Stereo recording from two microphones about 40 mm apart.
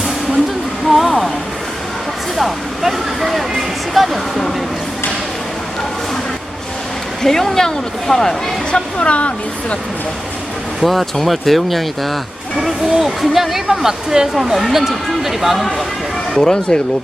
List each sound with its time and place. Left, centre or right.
0.9 s a sound: centre
2.4 s vehicle: centre
3.9 s a sound: centre
7.2 s speech: centre
9.0 s speech: left
10.8 s speech: centre
16.4 s speech: centre